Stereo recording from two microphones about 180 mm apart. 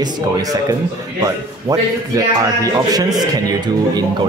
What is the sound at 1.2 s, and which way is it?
Speech, 20° right (ahead or behind).